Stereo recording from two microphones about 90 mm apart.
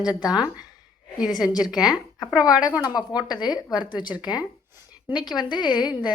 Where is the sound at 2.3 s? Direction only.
45° left (ahead or behind).